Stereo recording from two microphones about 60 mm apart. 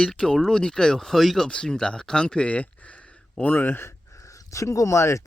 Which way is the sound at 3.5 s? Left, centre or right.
Left.